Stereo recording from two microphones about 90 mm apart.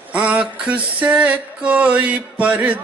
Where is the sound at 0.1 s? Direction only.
15° right (ahead or behind).